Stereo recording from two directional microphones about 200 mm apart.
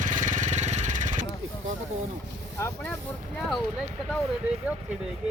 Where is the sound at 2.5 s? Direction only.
10° left (ahead or behind).